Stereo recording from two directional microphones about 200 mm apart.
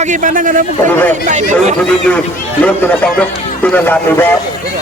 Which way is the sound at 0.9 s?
10° left (ahead or behind).